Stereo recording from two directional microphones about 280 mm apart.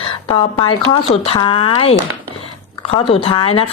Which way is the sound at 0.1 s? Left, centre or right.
Centre.